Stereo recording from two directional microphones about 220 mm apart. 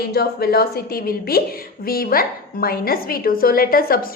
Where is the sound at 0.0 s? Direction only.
45° left (ahead or behind).